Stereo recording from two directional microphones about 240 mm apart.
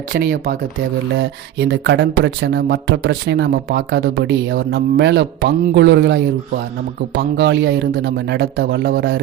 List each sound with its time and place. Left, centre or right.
0.1 s speech: right